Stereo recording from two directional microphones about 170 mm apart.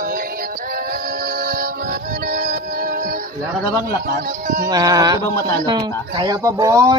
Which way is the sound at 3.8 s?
60° right (ahead or behind).